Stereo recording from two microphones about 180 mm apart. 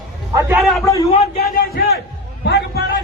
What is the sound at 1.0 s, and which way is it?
Speech, 35° left (ahead or behind).